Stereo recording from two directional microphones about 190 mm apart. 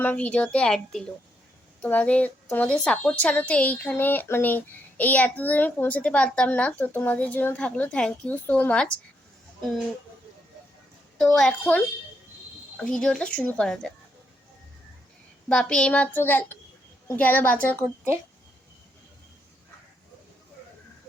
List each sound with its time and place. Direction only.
0.0 s a woman's voice: 5° left (ahead or behind)
11.2 s speech: 5° left (ahead or behind)
15.4 s a woman's voice: 5° left (ahead or behind)